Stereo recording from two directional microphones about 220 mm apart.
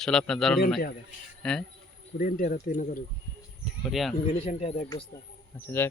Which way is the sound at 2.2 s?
40° left (ahead or behind).